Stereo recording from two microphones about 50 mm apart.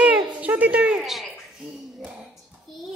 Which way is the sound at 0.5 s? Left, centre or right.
Right.